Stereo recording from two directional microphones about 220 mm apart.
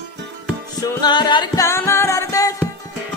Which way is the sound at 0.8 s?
20° left (ahead or behind).